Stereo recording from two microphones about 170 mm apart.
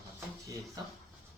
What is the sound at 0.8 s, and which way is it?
Speech, 20° right (ahead or behind).